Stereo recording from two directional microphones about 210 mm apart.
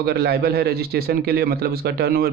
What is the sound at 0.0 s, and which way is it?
Speech, 50° right (ahead or behind).